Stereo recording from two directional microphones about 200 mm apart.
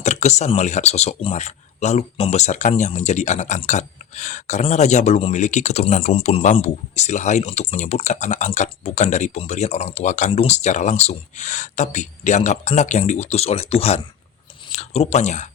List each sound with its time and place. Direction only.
0.0 s speech: 35° left (ahead or behind)